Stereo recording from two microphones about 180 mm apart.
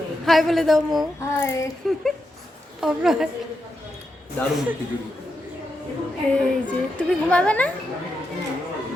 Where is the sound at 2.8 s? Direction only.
Centre (ahead or behind).